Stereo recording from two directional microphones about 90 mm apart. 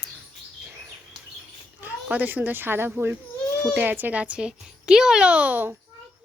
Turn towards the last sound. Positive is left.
turn(degrees=-20)  # may be behind; listen again after turning